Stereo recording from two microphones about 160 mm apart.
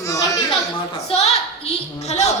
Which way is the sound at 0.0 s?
20° left (ahead or behind).